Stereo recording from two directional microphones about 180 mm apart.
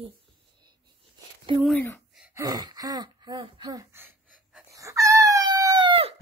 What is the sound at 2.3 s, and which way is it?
Gasp, 20° right (ahead or behind).